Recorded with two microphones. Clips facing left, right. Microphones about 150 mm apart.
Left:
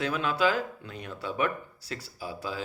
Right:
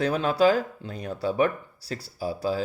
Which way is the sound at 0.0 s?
35° right (ahead or behind).